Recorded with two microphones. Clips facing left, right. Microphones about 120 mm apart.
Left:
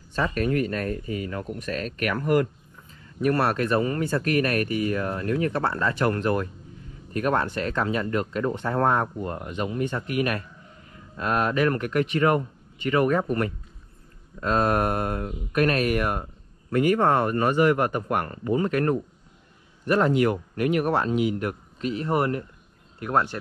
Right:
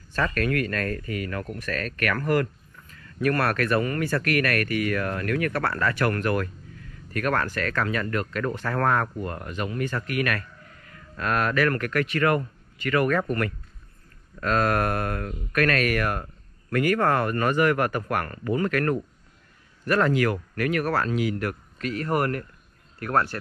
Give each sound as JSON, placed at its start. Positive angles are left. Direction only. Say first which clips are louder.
{"t": 0.2, "sound": "speech", "louder": "left 1 dB", "side_deg": 20}
{"t": 1.0, "sound": "speech", "louder": "left 1 dB", "side_deg": -70}
{"t": 1.3, "sound": "speech", "louder": "even", "side_deg": 20}